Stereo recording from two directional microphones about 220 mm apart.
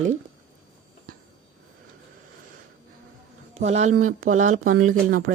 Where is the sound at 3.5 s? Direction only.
30° right (ahead or behind).